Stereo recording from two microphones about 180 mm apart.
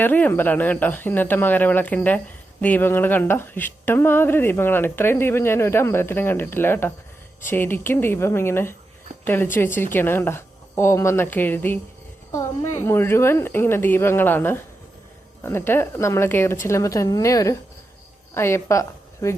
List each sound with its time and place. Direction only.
0.0 s speech: 10° left (ahead or behind)
12.8 s a woman's voice: 15° left (ahead or behind)